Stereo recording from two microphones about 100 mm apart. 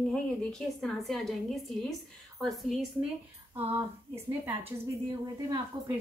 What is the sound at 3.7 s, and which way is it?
Speech, 25° right (ahead or behind).